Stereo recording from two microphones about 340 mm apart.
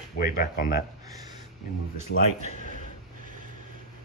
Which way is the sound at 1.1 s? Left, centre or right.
Centre.